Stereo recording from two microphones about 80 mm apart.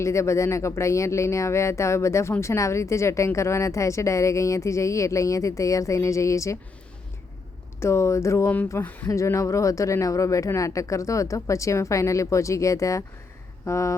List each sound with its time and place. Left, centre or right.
0.0 s speech: left
7.8 s speech: left
8.8 s speech: left
9.0 s speech: left